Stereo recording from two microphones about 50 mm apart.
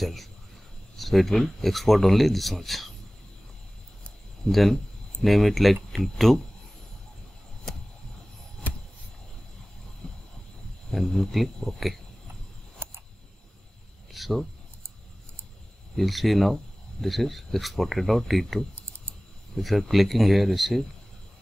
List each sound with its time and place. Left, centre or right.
0.0 s speech: centre
4.5 s speech: centre
10.0 s heart sounds: centre
10.9 s speech: centre
12.7 s a sound: right
14.1 s a sound: centre
16.0 s speech: centre